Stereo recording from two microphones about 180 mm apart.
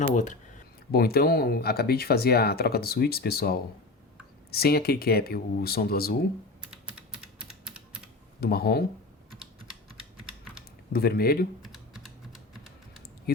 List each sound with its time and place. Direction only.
0.1 s speech: 45° left (ahead or behind)
0.9 s speech: 60° left (ahead or behind)
6.7 s typing: 5° right (ahead or behind)
8.4 s speech: 60° left (ahead or behind)
10.9 s speech: 60° left (ahead or behind)
11.6 s typing: centre (ahead or behind)
13.3 s a sound: 60° left (ahead or behind)